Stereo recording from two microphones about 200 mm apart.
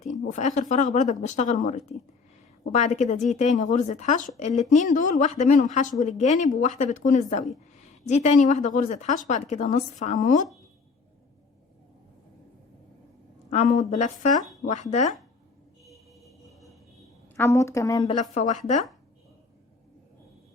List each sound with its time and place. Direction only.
0.0 s a woman's voice: 35° left (ahead or behind)
13.5 s a woman's voice: 35° left (ahead or behind)
15.9 s music: centre (ahead or behind)
17.3 s a woman's voice: 15° left (ahead or behind)
18.2 s a woman's voice: 35° left (ahead or behind)